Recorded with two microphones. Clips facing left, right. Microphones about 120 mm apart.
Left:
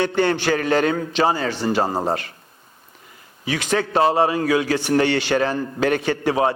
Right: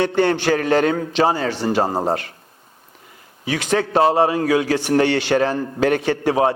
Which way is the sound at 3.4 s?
50° right (ahead or behind).